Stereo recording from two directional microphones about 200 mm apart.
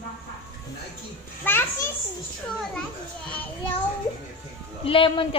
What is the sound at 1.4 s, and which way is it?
Speech, 10° left (ahead or behind).